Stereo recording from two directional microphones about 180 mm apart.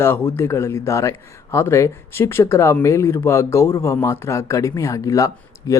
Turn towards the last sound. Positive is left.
turn(degrees=20)  # may be behind; listen again after turning